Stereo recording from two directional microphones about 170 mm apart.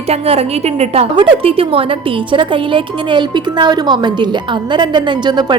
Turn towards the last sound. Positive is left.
turn(degrees=-25)  # may be behind; listen again after turning